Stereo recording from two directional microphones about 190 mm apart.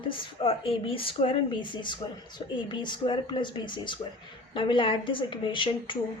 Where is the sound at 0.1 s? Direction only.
30° left (ahead or behind).